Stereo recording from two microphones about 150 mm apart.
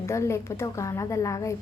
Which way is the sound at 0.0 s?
20° left (ahead or behind).